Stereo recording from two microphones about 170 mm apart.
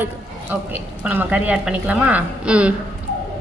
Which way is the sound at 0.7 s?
10° right (ahead or behind).